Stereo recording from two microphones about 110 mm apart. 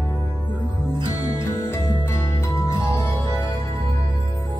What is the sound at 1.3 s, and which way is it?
Music, 25° left (ahead or behind).